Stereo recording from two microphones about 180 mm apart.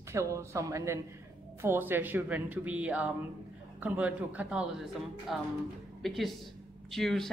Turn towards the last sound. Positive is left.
turn(degrees=0)  # may be behind; listen again after turning